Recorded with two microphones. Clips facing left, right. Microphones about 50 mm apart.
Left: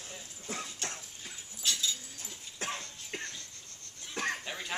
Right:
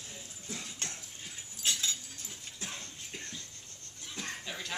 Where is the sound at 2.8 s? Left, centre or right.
Left.